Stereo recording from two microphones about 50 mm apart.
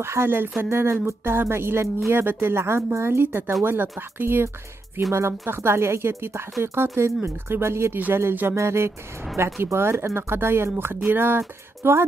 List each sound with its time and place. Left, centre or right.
0.0 s speech: right
5.1 s speech: right
8.1 s speech: right
8.5 s speech: right